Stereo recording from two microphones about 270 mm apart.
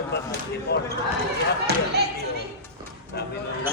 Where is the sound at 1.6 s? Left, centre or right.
Right.